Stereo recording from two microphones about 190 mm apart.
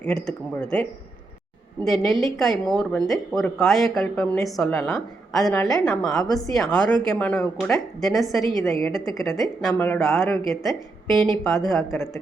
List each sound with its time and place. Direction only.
0.0 s a woman's voice: 5° left (ahead or behind)
6.2 s a woman's voice: 20° left (ahead or behind)
6.5 s a woman's voice: 5° left (ahead or behind)
8.5 s a woman's voice: 15° left (ahead or behind)
9.4 s a woman's voice: centre (ahead or behind)